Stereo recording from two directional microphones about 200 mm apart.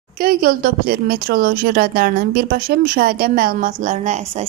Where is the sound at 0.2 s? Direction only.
45° right (ahead or behind).